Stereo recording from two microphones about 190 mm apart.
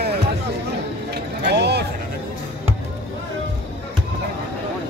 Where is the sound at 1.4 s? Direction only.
60° right (ahead or behind).